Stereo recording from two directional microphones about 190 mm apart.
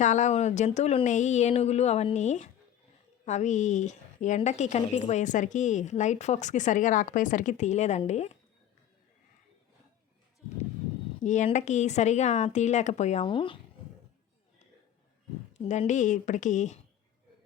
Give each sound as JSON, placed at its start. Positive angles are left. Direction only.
{"t": 0.0, "sound": "a woman's voice", "side_deg": 40}
{"t": 11.2, "sound": "a woman's voice", "side_deg": 40}
{"t": 15.5, "sound": "a woman's voice", "side_deg": 35}